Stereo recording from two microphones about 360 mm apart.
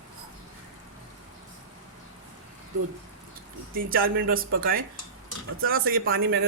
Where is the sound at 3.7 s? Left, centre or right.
Right.